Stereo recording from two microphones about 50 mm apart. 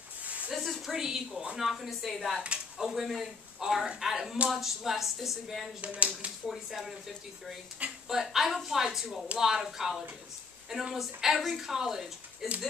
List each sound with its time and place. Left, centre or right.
0.5 s speech: centre
0.9 s speech: centre
5.8 s speech: right
6.5 s speech: centre
8.1 s speech: centre